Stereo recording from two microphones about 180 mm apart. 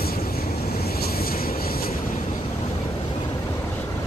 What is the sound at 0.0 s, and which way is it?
Vehicle, 55° left (ahead or behind).